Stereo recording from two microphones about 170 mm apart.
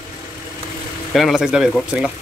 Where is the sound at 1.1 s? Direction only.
Centre (ahead or behind).